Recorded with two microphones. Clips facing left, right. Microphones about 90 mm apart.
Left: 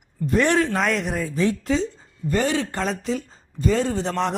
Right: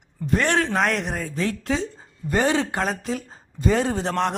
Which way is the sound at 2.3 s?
20° right (ahead or behind).